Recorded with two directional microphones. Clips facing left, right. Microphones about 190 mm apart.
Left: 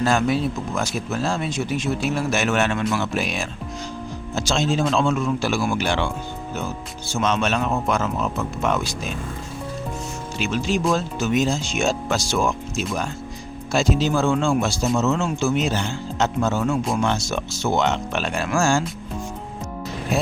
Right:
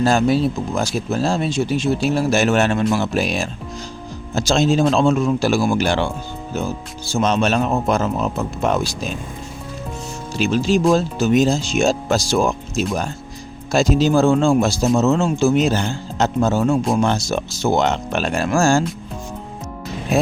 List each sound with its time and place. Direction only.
0.0 s speech: 35° right (ahead or behind)
7.1 s speech: 35° right (ahead or behind)
10.3 s speech: 35° right (ahead or behind)